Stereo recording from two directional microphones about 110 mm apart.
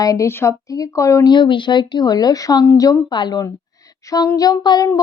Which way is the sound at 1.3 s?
45° left (ahead or behind).